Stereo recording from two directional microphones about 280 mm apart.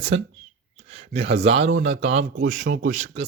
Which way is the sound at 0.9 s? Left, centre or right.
Right.